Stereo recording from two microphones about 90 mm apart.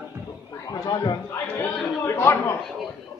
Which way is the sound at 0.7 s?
45° left (ahead or behind).